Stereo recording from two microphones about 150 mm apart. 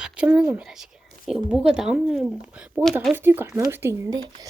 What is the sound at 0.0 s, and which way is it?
Speech, 5° right (ahead or behind).